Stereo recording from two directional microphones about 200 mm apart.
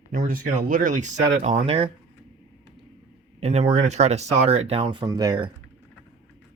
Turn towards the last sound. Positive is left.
turn(degrees=-20)  # may be behind; listen again after turning